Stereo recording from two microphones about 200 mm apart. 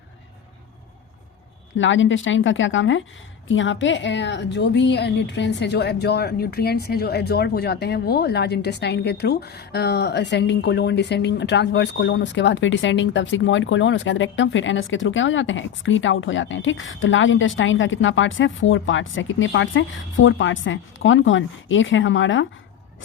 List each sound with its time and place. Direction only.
1.7 s a woman's voice: 70° left (ahead or behind)